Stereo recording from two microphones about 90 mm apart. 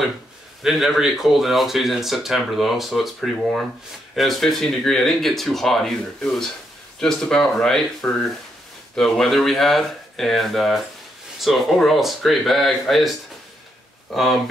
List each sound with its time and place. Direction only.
0.6 s speech: centre (ahead or behind)